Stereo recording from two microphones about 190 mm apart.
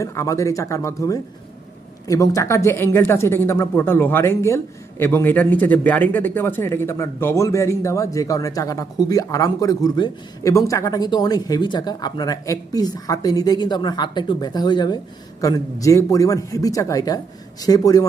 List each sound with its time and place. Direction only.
0.0 s speech: 15° left (ahead or behind)